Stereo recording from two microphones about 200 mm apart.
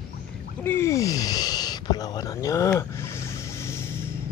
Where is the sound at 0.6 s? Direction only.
15° left (ahead or behind).